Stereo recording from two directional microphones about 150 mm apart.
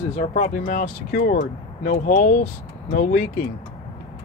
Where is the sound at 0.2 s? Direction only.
50° left (ahead or behind).